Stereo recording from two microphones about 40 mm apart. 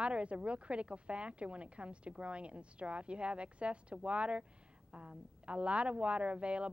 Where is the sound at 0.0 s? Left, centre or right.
Right.